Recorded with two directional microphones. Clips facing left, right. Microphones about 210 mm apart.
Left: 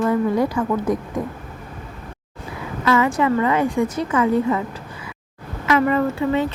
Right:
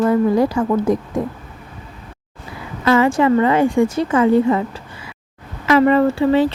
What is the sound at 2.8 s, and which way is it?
A woman's voice, 30° right (ahead or behind).